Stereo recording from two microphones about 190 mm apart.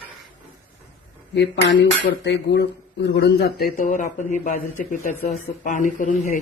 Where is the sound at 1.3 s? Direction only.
65° left (ahead or behind).